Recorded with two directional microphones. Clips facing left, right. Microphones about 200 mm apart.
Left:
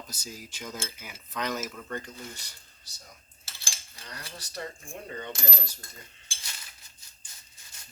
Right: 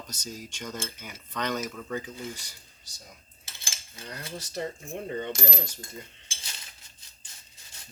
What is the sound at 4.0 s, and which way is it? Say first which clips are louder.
Coin: right 6 dB; 20° right (ahead or behind).